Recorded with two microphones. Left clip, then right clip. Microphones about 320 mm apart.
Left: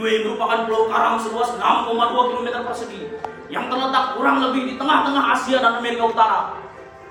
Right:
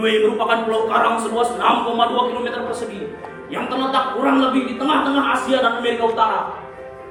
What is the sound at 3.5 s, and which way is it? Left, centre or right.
Speech, centre.